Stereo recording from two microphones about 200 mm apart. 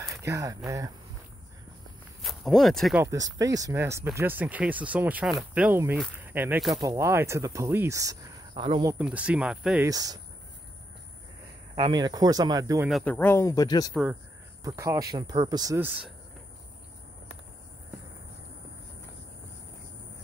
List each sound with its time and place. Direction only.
0.2 s speech: 15° right (ahead or behind)
2.2 s speech: centre (ahead or behind)
3.0 s speech: 15° right (ahead or behind)
6.8 s speech: 20° right (ahead or behind)
8.9 s speech: 5° right (ahead or behind)
9.8 s speech: 15° right (ahead or behind)
11.7 s speech: 20° right (ahead or behind)
12.8 s speech: 5° left (ahead or behind)
14.6 s speech: 15° right (ahead or behind)